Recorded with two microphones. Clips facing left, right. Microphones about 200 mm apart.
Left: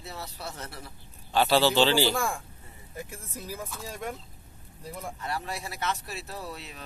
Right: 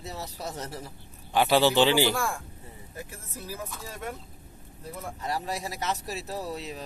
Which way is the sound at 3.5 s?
10° left (ahead or behind).